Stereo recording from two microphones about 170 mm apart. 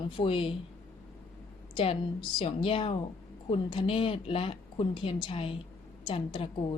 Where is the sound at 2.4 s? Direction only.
30° left (ahead or behind).